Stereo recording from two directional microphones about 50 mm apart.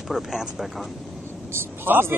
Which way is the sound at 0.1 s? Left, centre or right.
Centre.